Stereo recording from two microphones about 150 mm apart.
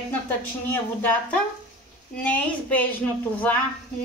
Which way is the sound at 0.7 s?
15° left (ahead or behind).